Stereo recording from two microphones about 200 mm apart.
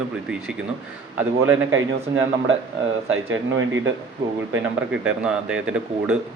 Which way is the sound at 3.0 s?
85° right.